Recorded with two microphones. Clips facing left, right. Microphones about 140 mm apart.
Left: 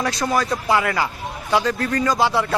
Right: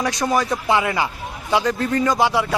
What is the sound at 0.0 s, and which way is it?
A man's voice, 15° right (ahead or behind).